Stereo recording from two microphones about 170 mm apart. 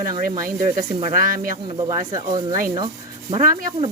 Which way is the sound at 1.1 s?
55° right (ahead or behind).